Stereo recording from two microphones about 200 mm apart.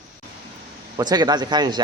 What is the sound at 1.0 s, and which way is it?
Speech, 20° right (ahead or behind).